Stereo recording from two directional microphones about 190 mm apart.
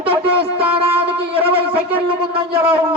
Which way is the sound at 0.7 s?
30° right (ahead or behind).